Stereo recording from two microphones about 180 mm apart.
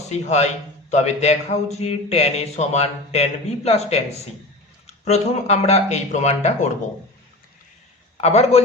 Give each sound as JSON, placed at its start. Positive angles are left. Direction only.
{"t": 0.1, "sound": "a man's voice", "side_deg": 35}
{"t": 5.0, "sound": "a man's voice", "side_deg": 35}
{"t": 8.2, "sound": "a man's voice", "side_deg": 35}